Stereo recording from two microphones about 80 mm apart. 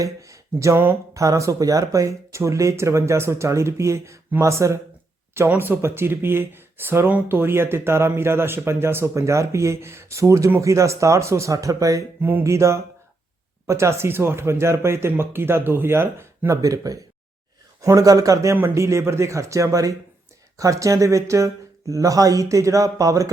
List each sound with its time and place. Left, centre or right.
0.0 s speech: right
5.5 s speech: right